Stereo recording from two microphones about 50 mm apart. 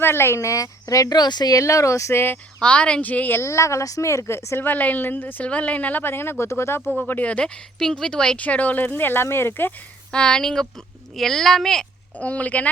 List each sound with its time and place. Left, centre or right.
0.0 s speech: left
0.3 s speech: left
2.6 s speech: left
3.0 s speech: left
3.3 s speech: left
4.6 s speech: left
6.0 s speech: left
7.1 s speech: left
7.3 s speech: centre
8.4 s speech: left
10.1 s speech: centre
12.2 s speech: left